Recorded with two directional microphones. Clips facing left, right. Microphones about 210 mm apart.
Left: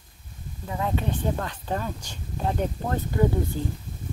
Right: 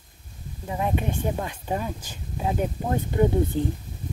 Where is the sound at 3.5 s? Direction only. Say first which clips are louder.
Right 5 dB; 20° right (ahead or behind).